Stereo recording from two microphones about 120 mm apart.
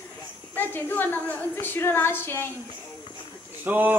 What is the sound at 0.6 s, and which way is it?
A woman's voice, 15° left (ahead or behind).